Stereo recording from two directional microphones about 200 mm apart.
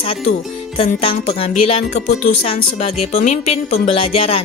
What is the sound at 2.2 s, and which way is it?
Speech, 30° left (ahead or behind).